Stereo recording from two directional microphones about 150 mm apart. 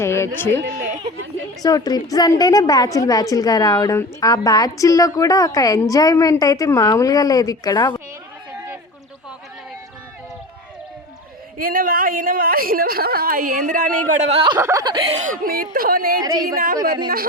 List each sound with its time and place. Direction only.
0.0 s speech: 15° left (ahead or behind)
0.6 s a sound: 65° right (ahead or behind)
1.6 s a woman's voice: 25° left (ahead or behind)
11.5 s a woman's voice: 70° right (ahead or behind)
14.1 s speech: 50° right (ahead or behind)
14.6 s speech: 20° right (ahead or behind)
15.1 s a woman's voice: 60° right (ahead or behind); by 16.1 s 75° right (ahead or behind)
16.2 s speech: 25° right (ahead or behind)